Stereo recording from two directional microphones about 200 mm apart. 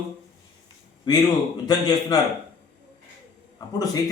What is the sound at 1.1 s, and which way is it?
A man's voice, 20° left (ahead or behind).